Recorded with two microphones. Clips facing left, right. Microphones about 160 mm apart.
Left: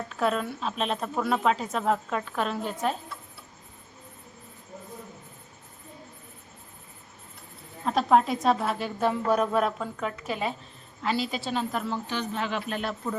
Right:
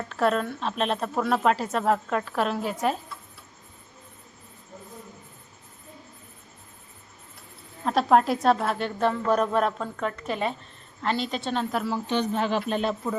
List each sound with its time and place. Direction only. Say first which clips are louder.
0.1 s a woman's voice: right 3 dB; centre (ahead or behind)
7.9 s a woman's voice: right 2 dB; centre (ahead or behind)
12.3 s speech: right 5 dB; 35° right (ahead or behind)
13.0 s a woman's voice: right 3 dB; 5° right (ahead or behind)